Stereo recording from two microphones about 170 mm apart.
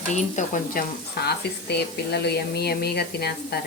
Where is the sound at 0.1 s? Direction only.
45° left (ahead or behind); by 3.6 s 70° left (ahead or behind).